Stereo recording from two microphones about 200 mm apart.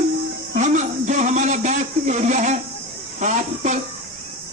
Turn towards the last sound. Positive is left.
turn(degrees=-35)  # may be behind; listen again after turning